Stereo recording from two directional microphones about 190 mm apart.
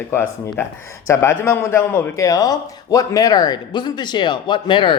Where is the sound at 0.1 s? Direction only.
15° left (ahead or behind).